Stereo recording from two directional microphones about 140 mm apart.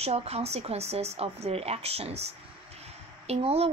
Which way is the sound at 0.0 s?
45° right (ahead or behind).